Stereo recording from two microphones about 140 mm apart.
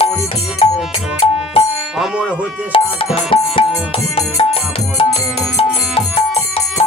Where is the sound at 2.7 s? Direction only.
40° left (ahead or behind).